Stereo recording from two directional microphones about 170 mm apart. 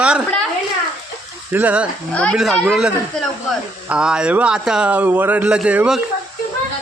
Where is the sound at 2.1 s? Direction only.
5° left (ahead or behind).